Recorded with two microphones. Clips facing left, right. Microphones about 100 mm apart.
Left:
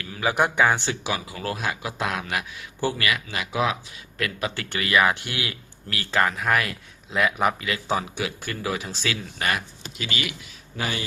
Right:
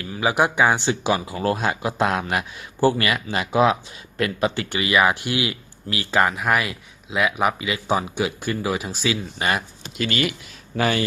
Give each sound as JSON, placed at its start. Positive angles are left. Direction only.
{"t": 0.0, "sound": "speech", "side_deg": -20}
{"t": 10.0, "sound": "speech", "side_deg": -50}
{"t": 10.8, "sound": "speech", "side_deg": -60}